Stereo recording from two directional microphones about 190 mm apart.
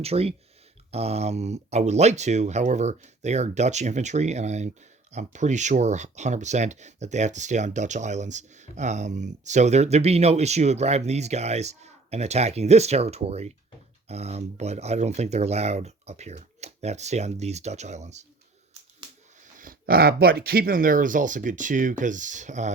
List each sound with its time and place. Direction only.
0.0 s speech: 30° right (ahead or behind)
19.5 s speech: 50° right (ahead or behind)